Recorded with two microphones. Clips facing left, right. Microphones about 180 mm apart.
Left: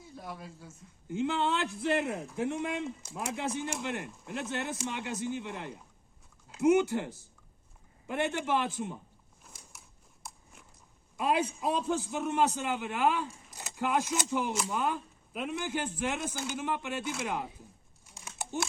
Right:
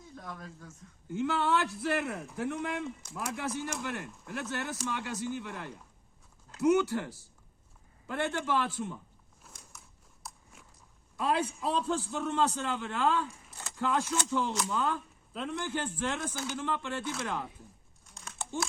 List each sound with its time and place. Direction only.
0.0 s speech: 10° left (ahead or behind)
1.0 s speech: 20° left (ahead or behind)
9.4 s a sound: 5° left (ahead or behind)
10.2 s biting: centre (ahead or behind)
11.2 s a man's voice: 15° left (ahead or behind)